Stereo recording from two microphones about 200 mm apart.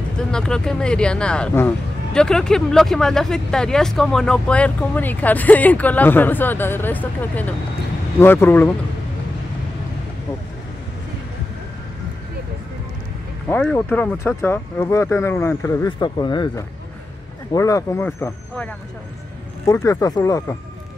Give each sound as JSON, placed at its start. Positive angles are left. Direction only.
{"t": 0.2, "sound": "speech", "side_deg": 5}
{"t": 13.5, "sound": "speech", "side_deg": 5}